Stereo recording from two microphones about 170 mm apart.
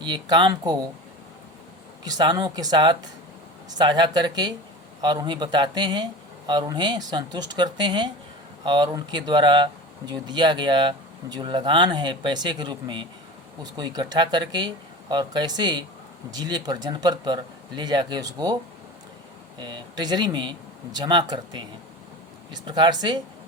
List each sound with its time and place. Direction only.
0.0 s speech: 25° right (ahead or behind)
2.0 s speech: 25° right (ahead or behind)
19.5 s speech: 25° right (ahead or behind)